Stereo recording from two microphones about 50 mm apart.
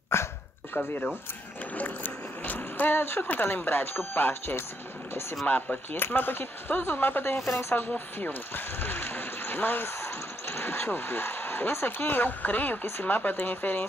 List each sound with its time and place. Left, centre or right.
0.1 s dog: left
0.8 s speech: left
1.8 s rowboat: left
3.2 s speech: left
5.5 s speech: left
5.9 s speech: left
7.3 s speech: centre
8.3 s speech: left